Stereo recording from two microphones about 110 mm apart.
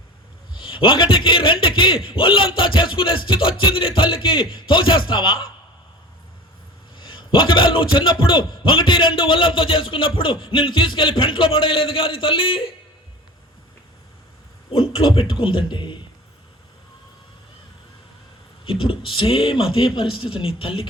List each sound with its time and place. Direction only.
0.5 s a man's voice: 50° left (ahead or behind)
6.9 s a man's voice: 50° left (ahead or behind)
14.7 s a man's voice: 55° left (ahead or behind)
18.6 s speech: 55° left (ahead or behind)